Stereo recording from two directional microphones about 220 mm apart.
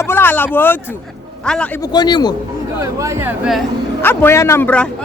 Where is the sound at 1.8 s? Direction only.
20° left (ahead or behind).